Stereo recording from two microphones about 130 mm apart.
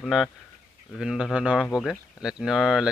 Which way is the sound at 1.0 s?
5° right (ahead or behind).